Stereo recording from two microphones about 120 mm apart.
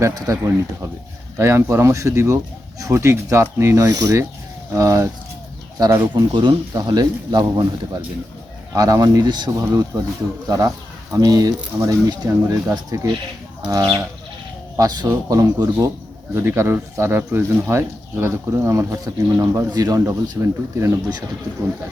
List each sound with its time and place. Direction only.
0.0 s speech: 30° right (ahead or behind)
8.7 s speech: 30° right (ahead or behind)
11.1 s speech: 30° right (ahead or behind)
16.3 s speech: 20° right (ahead or behind)